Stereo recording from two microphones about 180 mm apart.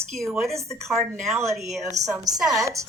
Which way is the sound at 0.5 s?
15° right (ahead or behind).